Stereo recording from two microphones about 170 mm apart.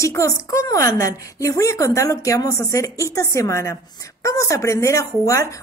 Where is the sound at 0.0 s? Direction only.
20° left (ahead or behind).